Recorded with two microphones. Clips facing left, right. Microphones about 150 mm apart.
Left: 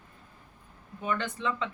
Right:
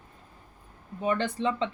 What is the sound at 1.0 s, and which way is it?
Speech, 35° right (ahead or behind).